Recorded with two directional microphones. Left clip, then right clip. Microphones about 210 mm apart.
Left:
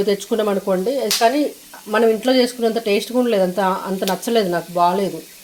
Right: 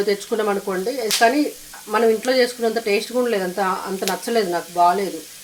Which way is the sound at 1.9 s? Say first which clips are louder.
Left 2 dB; 35° left (ahead or behind).